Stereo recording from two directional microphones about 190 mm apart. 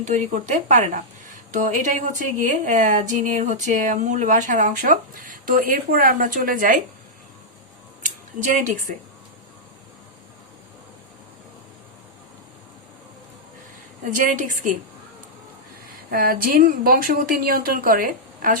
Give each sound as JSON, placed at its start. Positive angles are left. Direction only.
{"t": 0.0, "sound": "speech", "side_deg": -40}
{"t": 8.0, "sound": "speech", "side_deg": -40}
{"t": 14.0, "sound": "speech", "side_deg": -45}
{"t": 16.0, "sound": "speech", "side_deg": -50}